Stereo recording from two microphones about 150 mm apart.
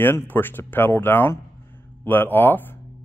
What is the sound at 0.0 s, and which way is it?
Speech, 15° left (ahead or behind).